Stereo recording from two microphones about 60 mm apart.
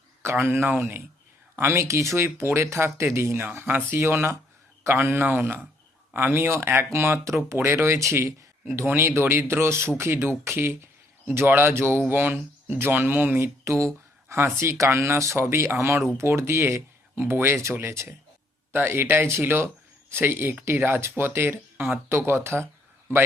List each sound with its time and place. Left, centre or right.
0.3 s speech: right
11.3 s speech: right
11.9 s speech: right
13.4 s speech: right
17.2 s speech: right